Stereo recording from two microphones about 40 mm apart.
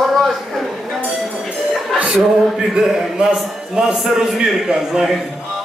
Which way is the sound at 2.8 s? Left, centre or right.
Centre.